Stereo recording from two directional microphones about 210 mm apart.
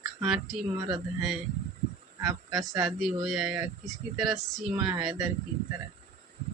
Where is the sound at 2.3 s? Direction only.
20° right (ahead or behind).